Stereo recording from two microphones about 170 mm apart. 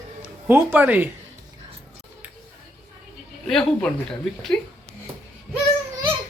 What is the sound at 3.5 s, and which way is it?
Speech, 5° left (ahead or behind).